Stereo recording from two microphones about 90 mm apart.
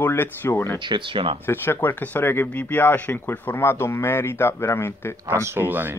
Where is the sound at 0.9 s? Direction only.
75° right (ahead or behind).